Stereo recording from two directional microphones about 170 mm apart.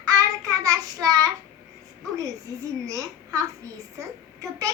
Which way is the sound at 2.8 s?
20° right (ahead or behind).